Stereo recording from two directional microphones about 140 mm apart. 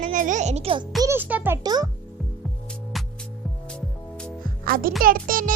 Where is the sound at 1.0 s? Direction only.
15° right (ahead or behind).